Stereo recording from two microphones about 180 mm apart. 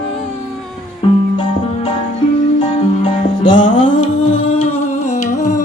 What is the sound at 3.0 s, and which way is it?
Music, 45° left (ahead or behind).